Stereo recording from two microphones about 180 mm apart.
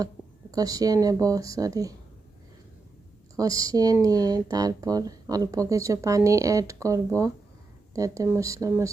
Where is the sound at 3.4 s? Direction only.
20° right (ahead or behind).